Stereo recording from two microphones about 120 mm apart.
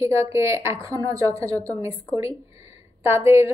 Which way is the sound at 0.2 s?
20° right (ahead or behind).